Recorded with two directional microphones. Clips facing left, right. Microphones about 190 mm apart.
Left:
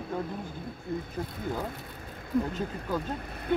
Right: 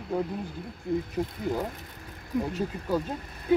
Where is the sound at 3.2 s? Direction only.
55° left (ahead or behind).